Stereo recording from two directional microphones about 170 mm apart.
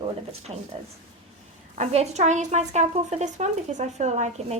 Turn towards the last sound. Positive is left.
turn(degrees=-40)  # may be behind; listen again after turning